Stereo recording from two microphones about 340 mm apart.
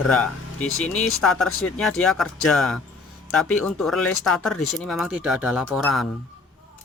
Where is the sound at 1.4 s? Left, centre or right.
Left.